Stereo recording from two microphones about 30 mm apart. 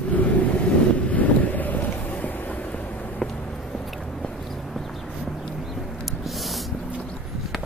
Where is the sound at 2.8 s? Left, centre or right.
Left.